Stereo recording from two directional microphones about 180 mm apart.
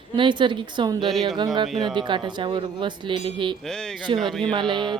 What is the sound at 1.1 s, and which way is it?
Speech, centre (ahead or behind).